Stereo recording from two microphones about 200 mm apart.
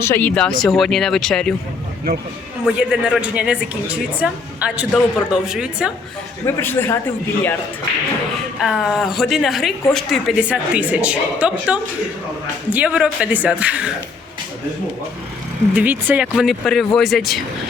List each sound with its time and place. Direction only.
0.0 s a man's voice: 10° left (ahead or behind)
2.6 s a woman's voice: 5° right (ahead or behind)
6.4 s a man's voice: 10° left (ahead or behind)
8.6 s a woman's voice: centre (ahead or behind)
15.7 s a woman's voice: 10° right (ahead or behind)